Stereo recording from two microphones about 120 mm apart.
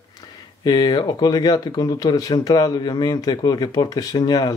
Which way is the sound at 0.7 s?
35° left (ahead or behind).